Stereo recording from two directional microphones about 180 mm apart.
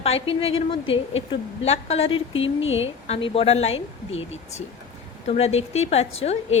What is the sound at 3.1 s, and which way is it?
Speech, 30° left (ahead or behind).